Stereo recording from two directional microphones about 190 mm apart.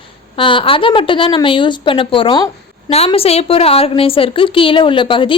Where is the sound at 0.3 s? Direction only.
25° left (ahead or behind).